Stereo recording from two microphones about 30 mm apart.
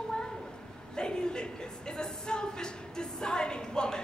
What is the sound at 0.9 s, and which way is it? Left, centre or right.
A woman's voice, left.